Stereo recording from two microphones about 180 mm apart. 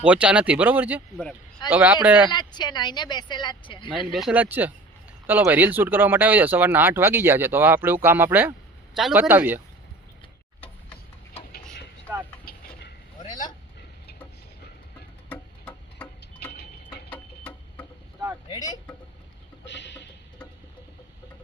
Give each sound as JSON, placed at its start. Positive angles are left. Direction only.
{"t": 0.0, "sound": "speech", "side_deg": -5}
{"t": 2.3, "sound": "speech", "side_deg": 25}
{"t": 3.9, "sound": "speech", "side_deg": 0}
{"t": 12.1, "sound": "speech", "side_deg": -10}
{"t": 12.5, "sound": "chicken", "side_deg": 55}
{"t": 13.2, "sound": "vehicle", "side_deg": 45}
{"t": 15.3, "sound": "a sound", "side_deg": 10}
{"t": 18.4, "sound": "a sound", "side_deg": 20}
{"t": 19.6, "sound": "music", "side_deg": 80}